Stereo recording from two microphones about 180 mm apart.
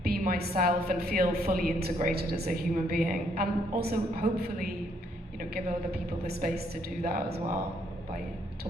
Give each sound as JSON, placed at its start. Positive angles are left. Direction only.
{"t": 0.0, "sound": "a woman's voice", "side_deg": -55}